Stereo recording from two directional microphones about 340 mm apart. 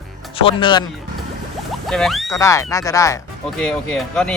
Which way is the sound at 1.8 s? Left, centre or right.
Centre.